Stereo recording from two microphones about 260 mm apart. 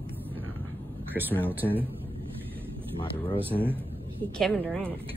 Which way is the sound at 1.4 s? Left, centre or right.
Centre.